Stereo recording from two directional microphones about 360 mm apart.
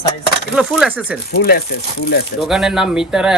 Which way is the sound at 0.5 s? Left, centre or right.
Centre.